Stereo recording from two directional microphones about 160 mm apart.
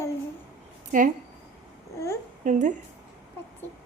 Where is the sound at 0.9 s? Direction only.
55° right (ahead or behind).